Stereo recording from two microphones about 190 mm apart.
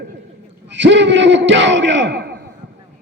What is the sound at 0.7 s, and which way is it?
A man's voice, 70° right (ahead or behind).